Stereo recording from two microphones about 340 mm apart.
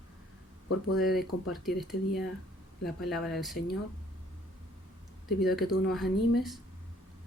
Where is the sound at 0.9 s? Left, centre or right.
Centre.